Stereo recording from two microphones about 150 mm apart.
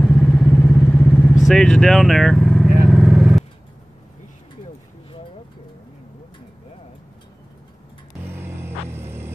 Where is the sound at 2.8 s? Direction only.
5° right (ahead or behind).